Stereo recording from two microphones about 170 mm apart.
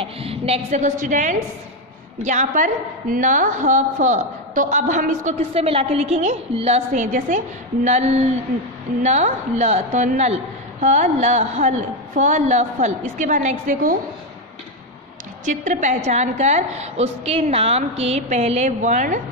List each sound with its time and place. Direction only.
0.0 s a woman's voice: 35° right (ahead or behind)
5.5 s a woman's voice: 35° right (ahead or behind)
15.4 s a woman's voice: 50° right (ahead or behind)